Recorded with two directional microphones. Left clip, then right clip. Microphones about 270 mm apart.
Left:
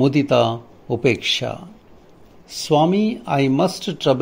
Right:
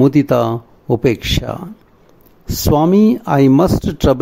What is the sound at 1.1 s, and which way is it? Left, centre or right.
Speech, right.